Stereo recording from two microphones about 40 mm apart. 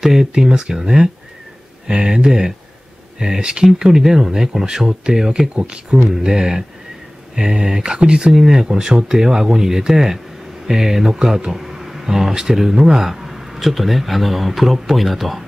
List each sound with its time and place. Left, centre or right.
0.0 s speech: centre
5.5 s speech: right
8.3 s speech: centre